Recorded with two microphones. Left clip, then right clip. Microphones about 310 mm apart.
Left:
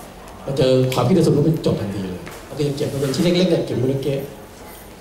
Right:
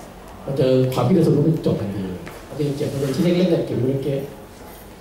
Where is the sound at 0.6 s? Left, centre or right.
Centre.